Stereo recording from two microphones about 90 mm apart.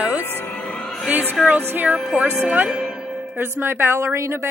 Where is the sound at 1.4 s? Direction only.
Centre (ahead or behind).